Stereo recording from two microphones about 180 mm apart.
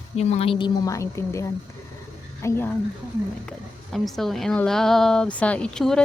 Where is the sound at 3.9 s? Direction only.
Centre (ahead or behind).